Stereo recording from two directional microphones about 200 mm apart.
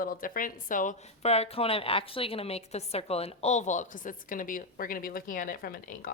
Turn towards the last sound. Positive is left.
turn(degrees=45)  # may be behind; listen again after turning